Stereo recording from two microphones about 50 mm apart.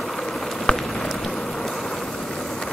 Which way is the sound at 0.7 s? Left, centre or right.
Centre.